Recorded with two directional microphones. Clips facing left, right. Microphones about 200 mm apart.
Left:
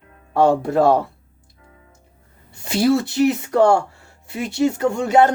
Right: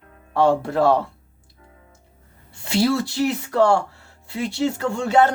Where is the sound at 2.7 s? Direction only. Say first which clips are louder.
Left 3 dB; 20° left (ahead or behind).